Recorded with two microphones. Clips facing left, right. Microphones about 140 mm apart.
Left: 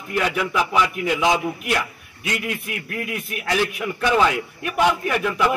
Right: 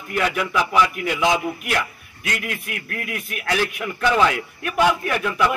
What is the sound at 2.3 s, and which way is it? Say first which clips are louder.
A man's voice: left 2 dB; 20° left (ahead or behind).